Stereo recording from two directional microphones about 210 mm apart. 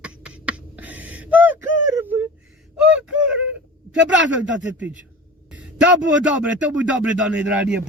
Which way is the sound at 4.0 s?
60° right (ahead or behind).